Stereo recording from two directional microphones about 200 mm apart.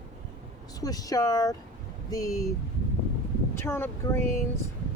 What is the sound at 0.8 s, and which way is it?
Speech, 20° left (ahead or behind).